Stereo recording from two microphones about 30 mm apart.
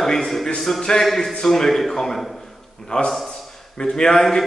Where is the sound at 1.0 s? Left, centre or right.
Centre.